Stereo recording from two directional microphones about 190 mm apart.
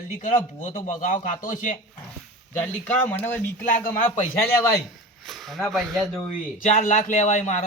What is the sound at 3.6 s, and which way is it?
Speech, 45° left (ahead or behind).